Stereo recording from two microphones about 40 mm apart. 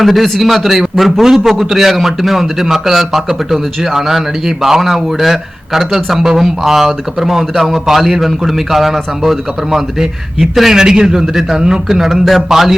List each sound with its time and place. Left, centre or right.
0.0 s a man's voice: centre